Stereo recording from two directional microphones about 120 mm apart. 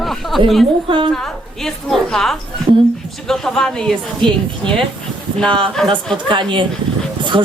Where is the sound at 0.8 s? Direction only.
45° right (ahead or behind).